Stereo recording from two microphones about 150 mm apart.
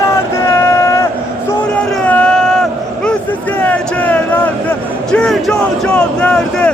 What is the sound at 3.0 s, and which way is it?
Speech, 10° left (ahead or behind).